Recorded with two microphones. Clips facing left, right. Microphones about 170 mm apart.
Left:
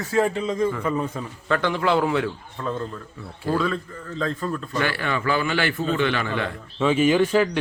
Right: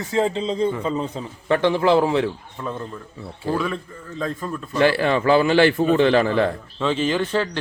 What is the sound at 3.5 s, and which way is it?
A man's voice, 15° right (ahead or behind).